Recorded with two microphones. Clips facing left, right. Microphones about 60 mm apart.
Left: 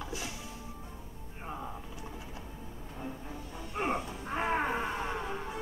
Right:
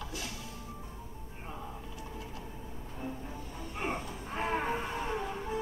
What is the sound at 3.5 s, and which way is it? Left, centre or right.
Music, left.